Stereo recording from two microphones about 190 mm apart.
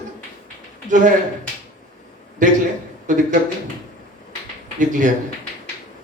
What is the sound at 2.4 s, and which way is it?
Speech, 40° right (ahead or behind).